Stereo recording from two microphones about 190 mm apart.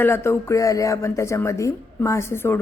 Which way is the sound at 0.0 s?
15° left (ahead or behind).